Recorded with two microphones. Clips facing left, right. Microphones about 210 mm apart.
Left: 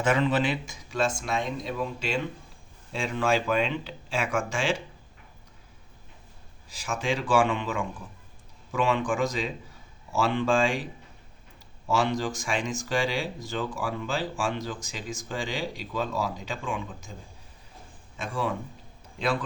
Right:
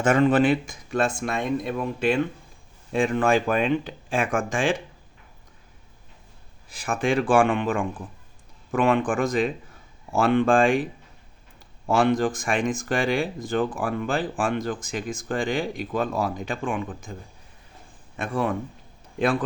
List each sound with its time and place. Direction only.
0.0 s speech: 50° right (ahead or behind)
6.7 s speech: 55° right (ahead or behind)
11.9 s speech: 55° right (ahead or behind)
18.2 s speech: 55° right (ahead or behind)